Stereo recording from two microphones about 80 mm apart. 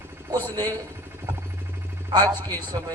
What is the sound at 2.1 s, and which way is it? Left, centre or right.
Speech, right.